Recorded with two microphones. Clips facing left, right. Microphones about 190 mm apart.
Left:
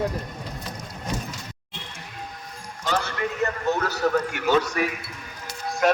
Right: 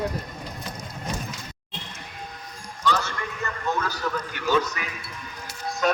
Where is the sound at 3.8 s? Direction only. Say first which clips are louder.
Left 6 dB; 70° left (ahead or behind).